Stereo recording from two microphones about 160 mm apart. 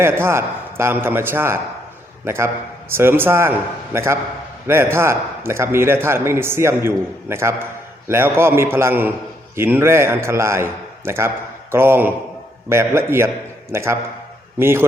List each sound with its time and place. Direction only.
0.0 s a man's voice: 15° right (ahead or behind)